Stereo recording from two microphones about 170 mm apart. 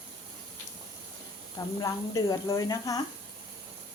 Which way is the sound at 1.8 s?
20° left (ahead or behind).